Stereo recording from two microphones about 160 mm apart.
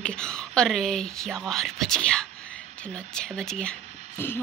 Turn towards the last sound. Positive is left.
turn(degrees=15)  # may be behind; listen again after turning